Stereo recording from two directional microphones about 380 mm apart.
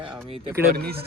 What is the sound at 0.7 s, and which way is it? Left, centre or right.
Speech, right.